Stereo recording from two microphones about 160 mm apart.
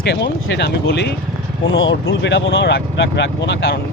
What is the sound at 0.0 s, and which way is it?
Speech, 90° left.